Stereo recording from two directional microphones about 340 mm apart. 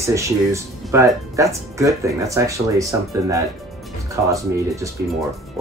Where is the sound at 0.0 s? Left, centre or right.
Centre.